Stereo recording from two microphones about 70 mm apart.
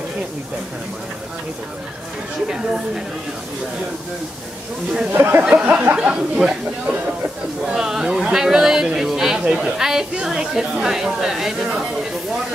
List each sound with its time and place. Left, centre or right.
5.1 s speech: right
5.4 s speech: centre